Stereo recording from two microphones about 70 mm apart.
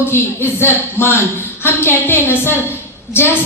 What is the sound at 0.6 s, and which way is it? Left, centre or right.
A woman's voice, left.